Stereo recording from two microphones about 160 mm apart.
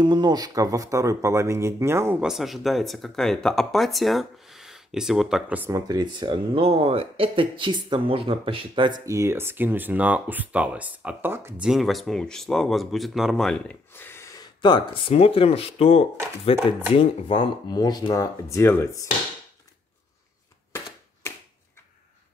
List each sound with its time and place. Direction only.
0.0 s speech: 30° right (ahead or behind)
2.2 s speech: centre (ahead or behind)
5.7 s speech: 20° right (ahead or behind)
9.0 s speech: 20° right (ahead or behind)
11.6 s speech: centre (ahead or behind)
13.9 s speech: 15° left (ahead or behind)